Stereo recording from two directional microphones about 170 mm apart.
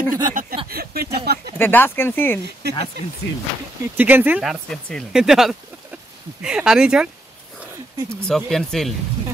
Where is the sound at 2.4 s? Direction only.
75° right (ahead or behind).